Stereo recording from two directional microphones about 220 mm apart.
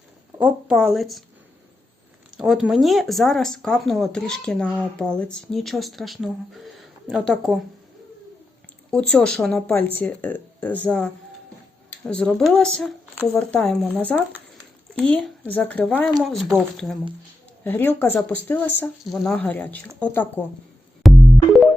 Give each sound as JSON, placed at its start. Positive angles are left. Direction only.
{"t": 0.3, "sound": "speech", "side_deg": -5}
{"t": 2.3, "sound": "speech", "side_deg": 0}
{"t": 8.9, "sound": "speech", "side_deg": 5}
{"t": 21.0, "sound": "music", "side_deg": 0}